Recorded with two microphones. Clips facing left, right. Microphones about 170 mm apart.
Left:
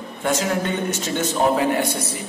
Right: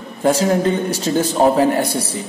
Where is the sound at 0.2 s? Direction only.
35° right (ahead or behind).